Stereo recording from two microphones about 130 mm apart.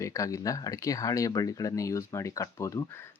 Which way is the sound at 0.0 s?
25° left (ahead or behind).